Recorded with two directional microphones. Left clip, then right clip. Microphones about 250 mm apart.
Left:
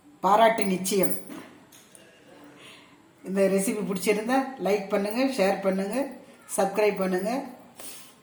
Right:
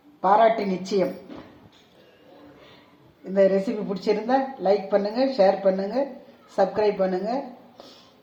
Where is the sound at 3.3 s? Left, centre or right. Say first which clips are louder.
Right 4 dB; left.